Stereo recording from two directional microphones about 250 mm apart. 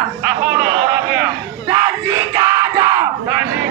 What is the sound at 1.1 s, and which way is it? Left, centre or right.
Crowd, centre.